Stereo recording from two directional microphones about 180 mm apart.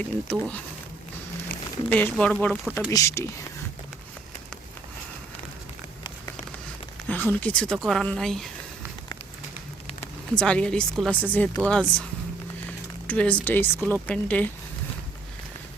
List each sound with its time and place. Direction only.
0.3 s speech: 5° left (ahead or behind)
1.9 s speech: 5° left (ahead or behind)
2.9 s speech: 15° left (ahead or behind)
7.1 s speech: 10° left (ahead or behind)
10.3 s speech: 5° left (ahead or behind)
13.1 s speech: 5° left (ahead or behind)